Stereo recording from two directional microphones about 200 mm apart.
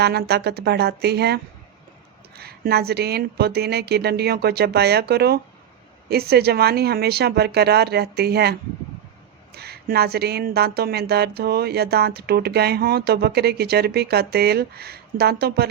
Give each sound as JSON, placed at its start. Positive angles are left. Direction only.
{"t": 0.0, "sound": "speech", "side_deg": -55}
{"t": 9.6, "sound": "speech", "side_deg": -50}